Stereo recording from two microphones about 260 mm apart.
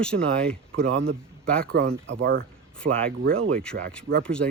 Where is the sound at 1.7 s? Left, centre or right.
Right.